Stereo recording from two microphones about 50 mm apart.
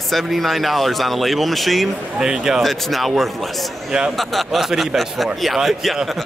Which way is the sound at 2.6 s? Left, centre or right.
Centre.